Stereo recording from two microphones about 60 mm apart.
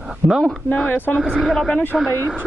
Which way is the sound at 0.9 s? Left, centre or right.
Left.